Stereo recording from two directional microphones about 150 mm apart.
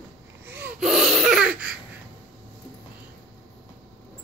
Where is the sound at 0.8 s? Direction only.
5° right (ahead or behind).